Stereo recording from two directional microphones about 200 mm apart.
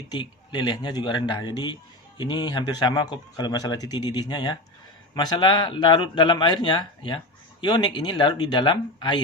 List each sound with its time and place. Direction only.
0.1 s a man's voice: 20° left (ahead or behind)